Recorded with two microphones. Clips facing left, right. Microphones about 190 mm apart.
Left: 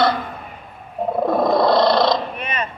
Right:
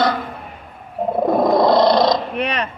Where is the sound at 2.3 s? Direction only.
70° right (ahead or behind).